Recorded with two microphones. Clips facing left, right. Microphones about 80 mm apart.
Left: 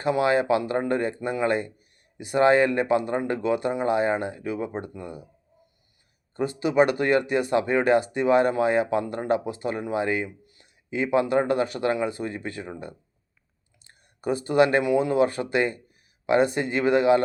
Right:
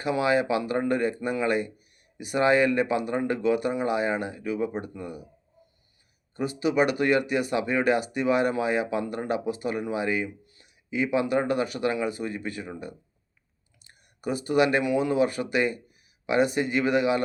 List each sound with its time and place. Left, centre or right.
0.0 s speech: left
6.3 s speech: left
10.2 s a sound: left
10.8 s speech: left
13.8 s speech: left